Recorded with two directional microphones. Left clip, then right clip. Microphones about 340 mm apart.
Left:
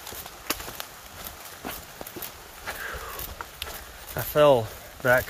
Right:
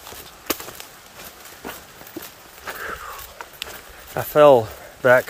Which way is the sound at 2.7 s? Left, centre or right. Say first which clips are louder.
Right 3 dB; centre.